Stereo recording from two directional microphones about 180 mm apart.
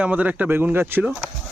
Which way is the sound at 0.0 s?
10° right (ahead or behind).